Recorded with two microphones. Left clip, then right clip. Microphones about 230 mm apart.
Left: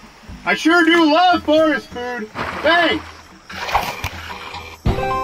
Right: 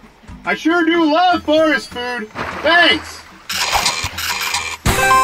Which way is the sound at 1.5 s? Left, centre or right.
Centre.